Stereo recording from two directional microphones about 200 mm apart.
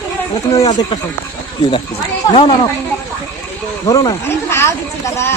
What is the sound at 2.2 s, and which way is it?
Speech, 20° left (ahead or behind).